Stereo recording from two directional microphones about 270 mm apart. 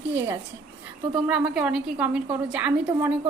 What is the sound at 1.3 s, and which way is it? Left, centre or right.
A woman's voice, centre.